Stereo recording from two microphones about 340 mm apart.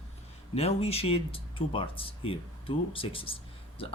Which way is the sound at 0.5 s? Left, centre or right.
Centre.